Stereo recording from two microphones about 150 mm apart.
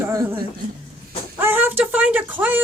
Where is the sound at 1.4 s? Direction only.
15° right (ahead or behind).